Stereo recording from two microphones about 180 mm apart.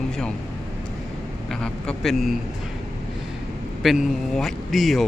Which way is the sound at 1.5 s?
5° left (ahead or behind).